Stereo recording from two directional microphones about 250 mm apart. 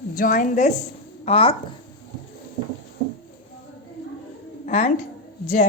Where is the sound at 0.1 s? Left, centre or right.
Left.